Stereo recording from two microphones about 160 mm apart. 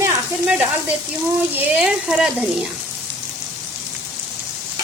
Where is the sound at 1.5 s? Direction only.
5° right (ahead or behind).